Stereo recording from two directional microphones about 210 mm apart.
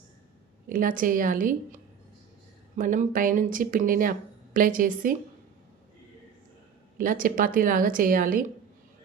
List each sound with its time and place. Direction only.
0.7 s speech: 40° right (ahead or behind)
7.0 s speech: 40° right (ahead or behind)